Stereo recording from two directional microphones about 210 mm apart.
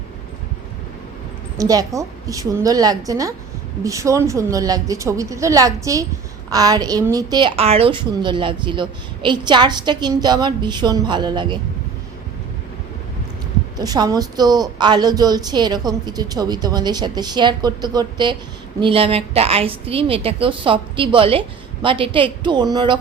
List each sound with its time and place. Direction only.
1.5 s a woman's voice: 15° right (ahead or behind)
13.7 s a woman's voice: 20° right (ahead or behind)